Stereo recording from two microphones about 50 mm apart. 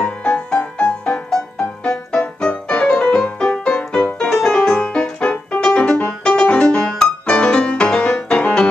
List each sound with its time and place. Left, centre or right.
0.0 s music: left
1.1 s music: centre